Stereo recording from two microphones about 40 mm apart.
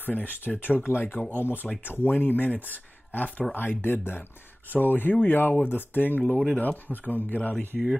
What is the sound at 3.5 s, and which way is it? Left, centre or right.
Speech, left.